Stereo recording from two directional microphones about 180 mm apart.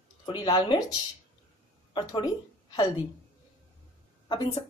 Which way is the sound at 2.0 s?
25° left (ahead or behind).